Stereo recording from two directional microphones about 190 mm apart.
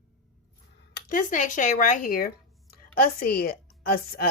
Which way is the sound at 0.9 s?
45° left (ahead or behind).